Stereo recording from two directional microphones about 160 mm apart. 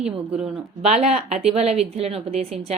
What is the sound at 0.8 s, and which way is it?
A woman's voice, 40° right (ahead or behind).